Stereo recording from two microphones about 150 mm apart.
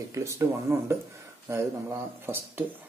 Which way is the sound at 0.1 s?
20° right (ahead or behind).